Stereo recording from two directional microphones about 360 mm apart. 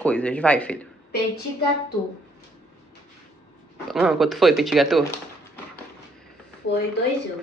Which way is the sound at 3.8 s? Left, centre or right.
Centre.